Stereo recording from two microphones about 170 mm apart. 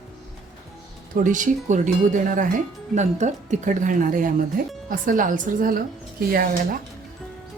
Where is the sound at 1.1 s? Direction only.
50° right (ahead or behind).